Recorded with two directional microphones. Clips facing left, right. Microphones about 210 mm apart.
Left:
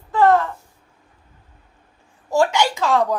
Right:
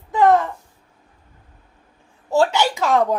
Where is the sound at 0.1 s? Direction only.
15° right (ahead or behind).